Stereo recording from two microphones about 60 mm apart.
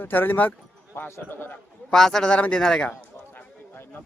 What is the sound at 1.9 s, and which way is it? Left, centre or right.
Speech, centre.